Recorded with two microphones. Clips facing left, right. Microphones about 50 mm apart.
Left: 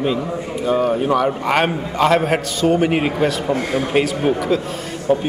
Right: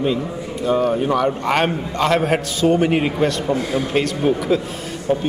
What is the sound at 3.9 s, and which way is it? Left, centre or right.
Speech, centre.